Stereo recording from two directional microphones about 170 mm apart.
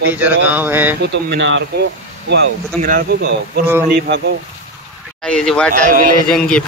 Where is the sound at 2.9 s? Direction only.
65° right (ahead or behind).